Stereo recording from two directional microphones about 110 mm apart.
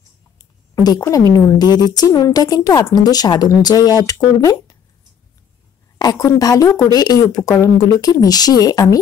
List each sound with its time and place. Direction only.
0.4 s a sound: 35° left (ahead or behind)
1.0 s a woman's voice: 30° left (ahead or behind)
5.9 s a woman's voice: 35° left (ahead or behind)